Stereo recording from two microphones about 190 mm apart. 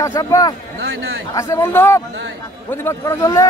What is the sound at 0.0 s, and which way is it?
Speech, 15° left (ahead or behind).